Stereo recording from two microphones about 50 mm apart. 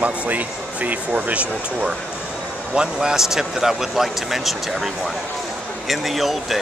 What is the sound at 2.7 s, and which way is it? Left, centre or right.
Speech, centre.